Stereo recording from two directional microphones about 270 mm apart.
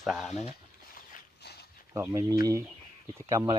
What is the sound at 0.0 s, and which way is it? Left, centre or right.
Speech, centre.